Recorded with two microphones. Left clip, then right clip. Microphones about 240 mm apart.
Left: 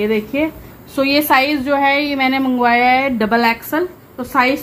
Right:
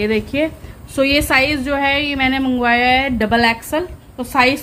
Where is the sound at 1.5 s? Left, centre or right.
Centre.